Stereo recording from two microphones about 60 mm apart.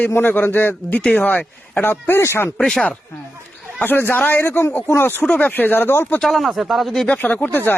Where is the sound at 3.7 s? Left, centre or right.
Left.